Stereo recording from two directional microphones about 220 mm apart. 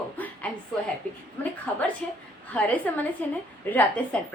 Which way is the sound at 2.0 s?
5° left (ahead or behind).